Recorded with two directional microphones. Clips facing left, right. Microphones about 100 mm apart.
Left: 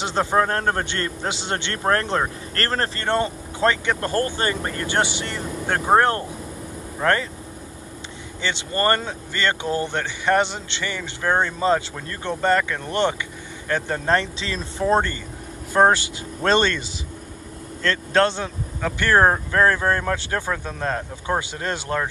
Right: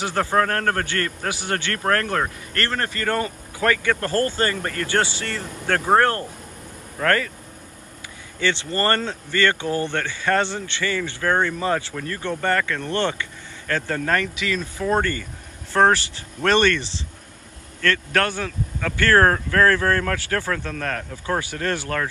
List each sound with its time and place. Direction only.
0.0 s speech: 20° left (ahead or behind)
2.5 s speech: 35° left (ahead or behind)
8.4 s speech: 20° left (ahead or behind)